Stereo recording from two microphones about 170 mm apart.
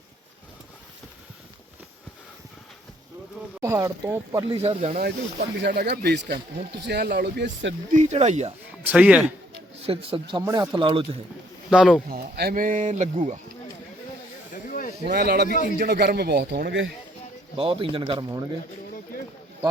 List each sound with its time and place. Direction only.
3.6 s speech: 20° right (ahead or behind)
4.4 s speech: 35° right (ahead or behind)
4.9 s speech: 65° right (ahead or behind); by 7.7 s 85° right
7.9 s speech: 40° right (ahead or behind)
8.8 s speech: 10° right (ahead or behind)
9.7 s speech: 35° right (ahead or behind)
11.7 s speech: 5° right (ahead or behind)
12.0 s speech: 65° right (ahead or behind); by 13.4 s 45° right (ahead or behind)
14.5 s snake: 50° left (ahead or behind)
15.1 s speech: 75° right (ahead or behind)
15.4 s speech: 50° left (ahead or behind)
15.8 s speech: 65° right (ahead or behind); by 16.9 s 85° right
17.6 s speech: 30° right (ahead or behind)